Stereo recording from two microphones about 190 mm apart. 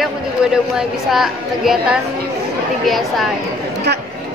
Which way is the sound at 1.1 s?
Centre (ahead or behind).